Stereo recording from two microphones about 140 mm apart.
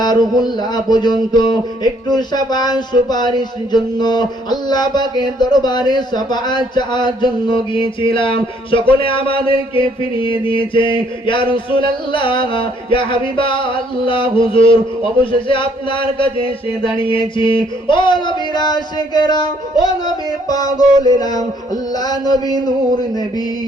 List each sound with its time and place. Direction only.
0.0 s speech: 30° left (ahead or behind)
4.7 s a sound: 30° left (ahead or behind)
20.1 s speech: 25° left (ahead or behind)